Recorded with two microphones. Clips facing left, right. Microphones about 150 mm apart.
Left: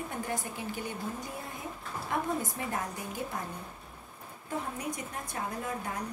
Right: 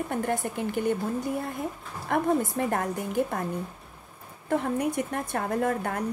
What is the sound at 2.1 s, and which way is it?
Speech, 55° right (ahead or behind).